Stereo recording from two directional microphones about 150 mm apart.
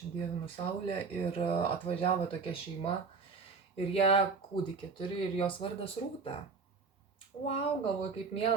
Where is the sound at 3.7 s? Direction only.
40° left (ahead or behind).